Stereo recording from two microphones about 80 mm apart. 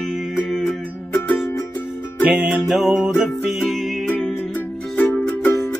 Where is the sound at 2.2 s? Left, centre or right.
Centre.